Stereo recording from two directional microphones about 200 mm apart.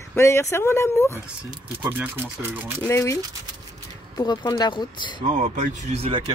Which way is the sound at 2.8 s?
15° left (ahead or behind).